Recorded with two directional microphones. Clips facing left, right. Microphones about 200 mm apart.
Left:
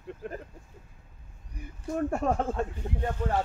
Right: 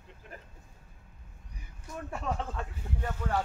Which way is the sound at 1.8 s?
50° left (ahead or behind).